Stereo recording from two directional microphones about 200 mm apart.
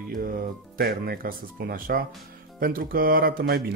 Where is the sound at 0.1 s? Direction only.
45° right (ahead or behind).